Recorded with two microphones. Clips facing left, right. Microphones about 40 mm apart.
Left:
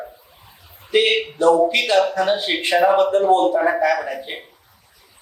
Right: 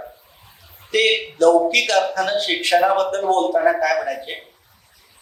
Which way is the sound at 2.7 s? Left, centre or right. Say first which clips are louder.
Left 2 dB; left.